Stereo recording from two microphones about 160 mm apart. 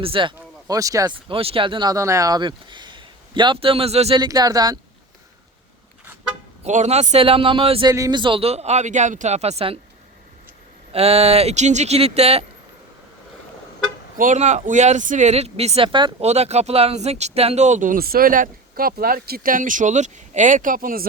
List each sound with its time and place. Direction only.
0.0 s speech: 35° right (ahead or behind)
0.3 s speech: 20° right (ahead or behind)
1.1 s speech: 35° right (ahead or behind)
4.2 s speech: 25° right (ahead or behind)
6.7 s speech: 45° right (ahead or behind)
7.9 s speech: 20° right (ahead or behind); by 9.7 s 40° right (ahead or behind)
10.9 s speech: 40° right (ahead or behind)
14.2 s speech: 50° right (ahead or behind); by 16.1 s 30° right (ahead or behind)
16.2 s speech: 40° right (ahead or behind); by 21.1 s 65° right (ahead or behind)